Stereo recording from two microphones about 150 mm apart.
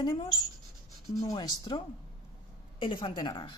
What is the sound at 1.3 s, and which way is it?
Speech, 25° left (ahead or behind).